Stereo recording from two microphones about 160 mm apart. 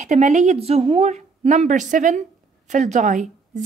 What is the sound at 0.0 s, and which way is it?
A woman's voice, 50° right (ahead or behind).